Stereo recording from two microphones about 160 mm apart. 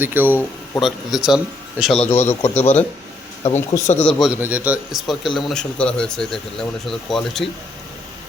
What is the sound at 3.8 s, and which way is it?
Speech, 50° left (ahead or behind).